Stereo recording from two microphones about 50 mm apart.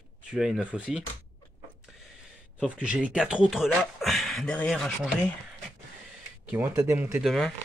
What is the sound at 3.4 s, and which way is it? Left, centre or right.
Speech, centre.